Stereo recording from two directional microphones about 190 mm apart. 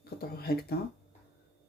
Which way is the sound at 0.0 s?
55° left (ahead or behind).